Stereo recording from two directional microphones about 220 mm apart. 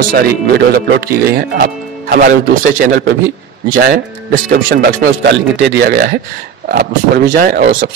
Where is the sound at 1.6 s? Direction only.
40° right (ahead or behind).